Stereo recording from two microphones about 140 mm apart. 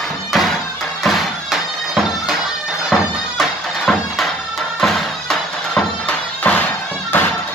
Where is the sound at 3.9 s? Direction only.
Centre (ahead or behind).